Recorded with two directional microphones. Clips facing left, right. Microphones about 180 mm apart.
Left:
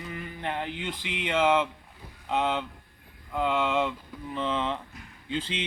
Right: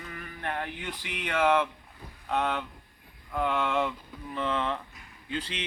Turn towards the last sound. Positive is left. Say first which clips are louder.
# left 3 dB
turn(degrees=25)  # may be behind; listen again after turning